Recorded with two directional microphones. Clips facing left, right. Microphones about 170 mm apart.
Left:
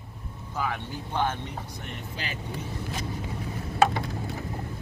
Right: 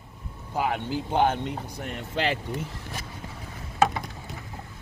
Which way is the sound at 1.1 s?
55° right (ahead or behind).